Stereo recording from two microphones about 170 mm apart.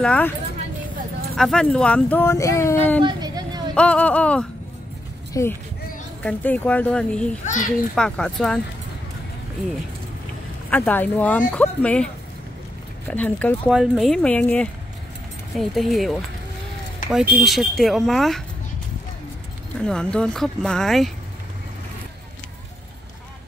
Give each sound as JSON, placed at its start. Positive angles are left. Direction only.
{"t": 0.0, "sound": "speech", "side_deg": 5}
{"t": 1.3, "sound": "speech", "side_deg": 5}
{"t": 3.0, "sound": "a sound", "side_deg": -25}
{"t": 3.7, "sound": "speech", "side_deg": 5}
{"t": 7.4, "sound": "a child's voice", "side_deg": 45}
{"t": 7.9, "sound": "speech", "side_deg": 5}
{"t": 10.7, "sound": "speech", "side_deg": 10}
{"t": 13.1, "sound": "speech", "side_deg": 10}
{"t": 13.7, "sound": "speech", "side_deg": 0}
{"t": 19.8, "sound": "speech", "side_deg": 5}